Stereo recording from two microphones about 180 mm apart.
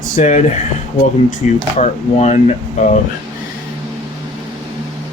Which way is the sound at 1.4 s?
40° left (ahead or behind).